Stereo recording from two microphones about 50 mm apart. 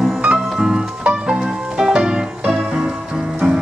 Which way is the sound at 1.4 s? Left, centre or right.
Centre.